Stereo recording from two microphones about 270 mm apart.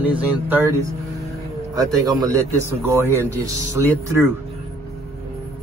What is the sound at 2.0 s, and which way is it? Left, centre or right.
Speech, centre.